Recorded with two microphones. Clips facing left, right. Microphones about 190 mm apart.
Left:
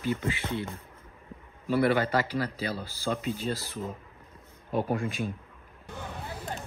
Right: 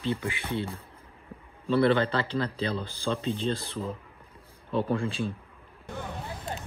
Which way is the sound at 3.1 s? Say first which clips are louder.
Right 2 dB; 30° right (ahead or behind).